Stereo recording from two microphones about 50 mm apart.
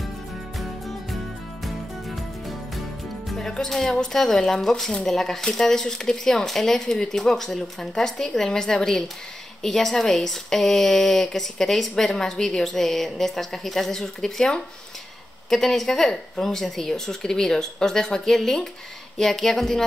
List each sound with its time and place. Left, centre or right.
0.6 s music: centre
3.3 s music: centre
3.5 s speech: centre
15.5 s speech: centre